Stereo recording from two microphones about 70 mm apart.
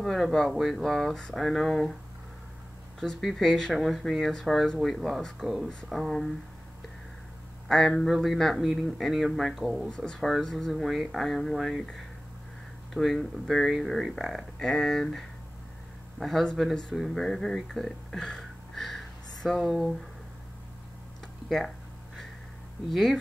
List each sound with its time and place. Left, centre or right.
0.0 s speech: centre
3.0 s speech: centre
7.6 s speech: centre
22.8 s speech: centre